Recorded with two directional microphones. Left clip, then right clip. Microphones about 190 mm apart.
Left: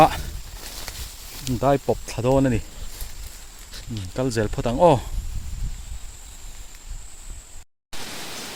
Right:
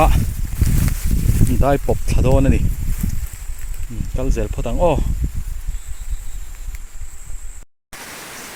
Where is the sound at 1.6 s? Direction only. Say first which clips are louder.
Right 1 dB; 10° right (ahead or behind).